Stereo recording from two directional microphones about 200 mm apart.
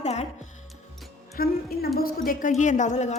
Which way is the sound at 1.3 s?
50° left (ahead or behind).